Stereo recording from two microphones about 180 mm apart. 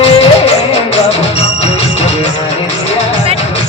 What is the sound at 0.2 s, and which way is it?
Music, 35° left (ahead or behind).